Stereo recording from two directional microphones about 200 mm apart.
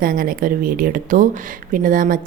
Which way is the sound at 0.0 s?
45° right (ahead or behind).